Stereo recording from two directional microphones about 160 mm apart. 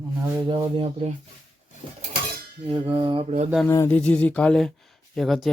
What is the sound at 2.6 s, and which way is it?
Speech, 35° right (ahead or behind).